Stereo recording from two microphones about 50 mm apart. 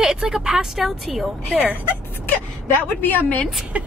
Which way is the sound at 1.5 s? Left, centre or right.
Right.